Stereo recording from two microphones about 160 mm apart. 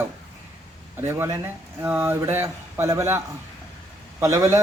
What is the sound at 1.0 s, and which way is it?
A man's voice, 15° right (ahead or behind).